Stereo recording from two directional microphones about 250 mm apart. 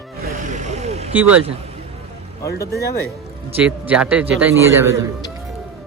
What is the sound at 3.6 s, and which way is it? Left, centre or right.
A man's voice, centre.